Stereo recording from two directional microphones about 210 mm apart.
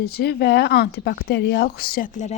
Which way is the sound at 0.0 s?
50° left (ahead or behind).